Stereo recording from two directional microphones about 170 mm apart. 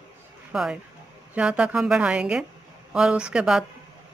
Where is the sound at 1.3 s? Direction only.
5° right (ahead or behind).